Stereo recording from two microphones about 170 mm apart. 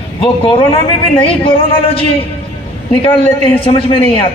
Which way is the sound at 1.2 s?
30° left (ahead or behind).